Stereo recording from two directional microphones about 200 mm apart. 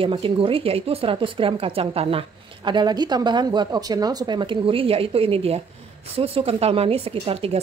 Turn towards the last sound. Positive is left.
turn(degrees=-30)  # may be behind; listen again after turning